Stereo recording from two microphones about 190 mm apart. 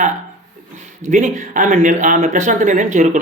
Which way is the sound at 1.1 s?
40° right (ahead or behind).